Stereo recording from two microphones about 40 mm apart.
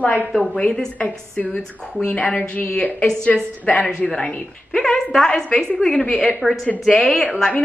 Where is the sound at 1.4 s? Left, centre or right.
Left.